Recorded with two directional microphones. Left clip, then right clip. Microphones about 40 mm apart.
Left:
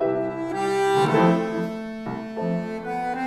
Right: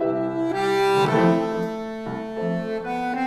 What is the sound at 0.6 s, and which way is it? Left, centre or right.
Music, right.